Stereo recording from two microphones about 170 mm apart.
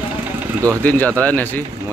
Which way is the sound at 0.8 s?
10° left (ahead or behind).